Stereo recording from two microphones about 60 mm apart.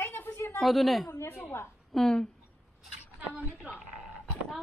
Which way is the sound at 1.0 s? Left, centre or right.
Left.